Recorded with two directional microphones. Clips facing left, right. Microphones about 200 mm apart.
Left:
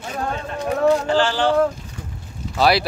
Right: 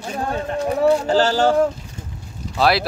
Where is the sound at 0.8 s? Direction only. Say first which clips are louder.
Right 1 dB; 40° right (ahead or behind).